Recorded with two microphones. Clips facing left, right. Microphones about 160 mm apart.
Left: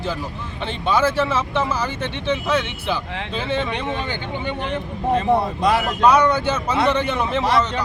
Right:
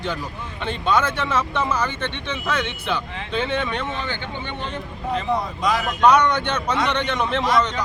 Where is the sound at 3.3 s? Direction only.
5° left (ahead or behind).